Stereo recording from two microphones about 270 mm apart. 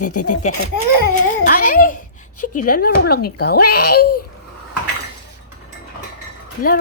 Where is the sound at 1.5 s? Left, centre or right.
Left.